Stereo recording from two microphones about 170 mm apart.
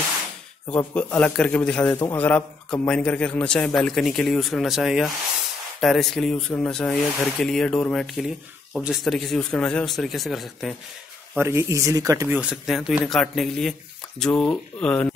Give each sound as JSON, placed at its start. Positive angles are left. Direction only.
{"t": 0.7, "sound": "a man's voice", "side_deg": 10}
{"t": 11.3, "sound": "speech", "side_deg": -15}
{"t": 12.4, "sound": "a man's voice", "side_deg": -5}